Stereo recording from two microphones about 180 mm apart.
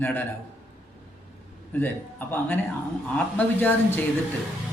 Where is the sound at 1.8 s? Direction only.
10° left (ahead or behind).